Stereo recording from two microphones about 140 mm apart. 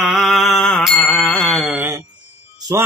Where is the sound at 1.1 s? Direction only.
5° left (ahead or behind).